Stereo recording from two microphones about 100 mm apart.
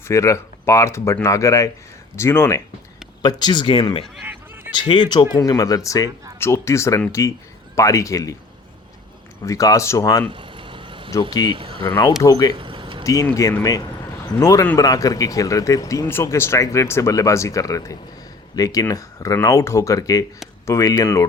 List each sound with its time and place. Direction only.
0.1 s speech: 30° left (ahead or behind)
3.2 s speech: 45° left (ahead or behind)
4.3 s a sound: 20° right (ahead or behind)
4.8 s speech: 50° left (ahead or behind)
5.3 s speech: 40° left (ahead or behind)
9.4 s speech: 35° left (ahead or behind)
10.2 s vehicle: 55° right (ahead or behind)
11.2 s speech: 45° left (ahead or behind)
11.5 s speech: 60° right (ahead or behind)
12.2 s speech: 40° left (ahead or behind)
12.5 s vehicle: 55° right (ahead or behind)
14.3 s speech: 35° left (ahead or behind)